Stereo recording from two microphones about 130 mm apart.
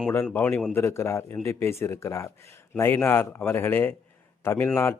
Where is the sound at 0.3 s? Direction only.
15° left (ahead or behind).